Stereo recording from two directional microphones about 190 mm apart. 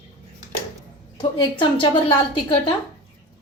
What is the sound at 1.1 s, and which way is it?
Speech, 25° left (ahead or behind).